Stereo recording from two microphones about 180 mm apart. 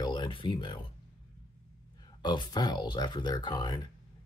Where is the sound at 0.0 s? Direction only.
25° left (ahead or behind).